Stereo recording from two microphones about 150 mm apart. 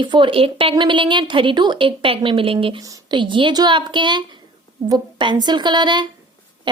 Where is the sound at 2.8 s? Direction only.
25° right (ahead or behind).